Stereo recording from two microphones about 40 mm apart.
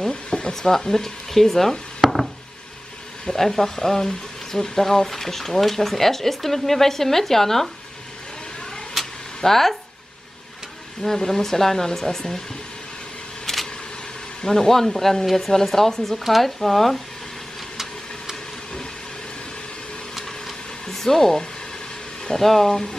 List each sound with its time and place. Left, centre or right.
0.1 s a sound: left
0.6 s speech: centre
3.3 s speech: centre
9.0 s a sound: centre
9.4 s speech: centre
11.1 s speech: centre
13.5 s vehicle: centre
14.4 s speech: centre
20.2 s vehicle: centre
20.8 s speech: centre